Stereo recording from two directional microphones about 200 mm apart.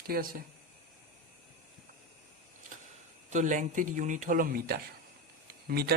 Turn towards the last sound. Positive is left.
turn(degrees=-50)  # may be behind; listen again after turning